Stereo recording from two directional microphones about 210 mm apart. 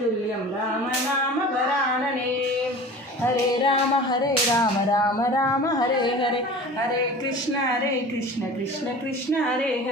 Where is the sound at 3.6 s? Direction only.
20° left (ahead or behind).